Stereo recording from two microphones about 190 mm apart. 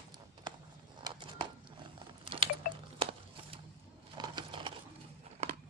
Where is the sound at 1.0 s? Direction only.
25° right (ahead or behind).